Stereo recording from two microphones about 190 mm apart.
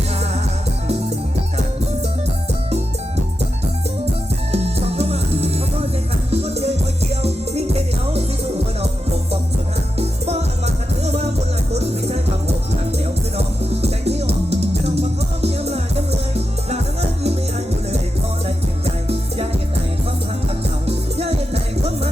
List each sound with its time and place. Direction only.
4.5 s music: 35° right (ahead or behind)
10.0 s music: 35° right (ahead or behind)
13.3 s music: 35° right (ahead or behind)
18.4 s music: 30° right (ahead or behind)
20.8 s music: 30° right (ahead or behind)